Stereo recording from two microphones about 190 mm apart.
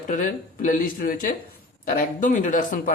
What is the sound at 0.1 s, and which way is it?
Speech, 45° left (ahead or behind).